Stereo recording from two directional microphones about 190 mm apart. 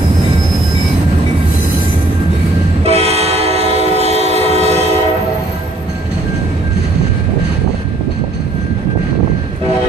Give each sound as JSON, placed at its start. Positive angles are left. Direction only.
{"t": 2.8, "sound": "train", "side_deg": -35}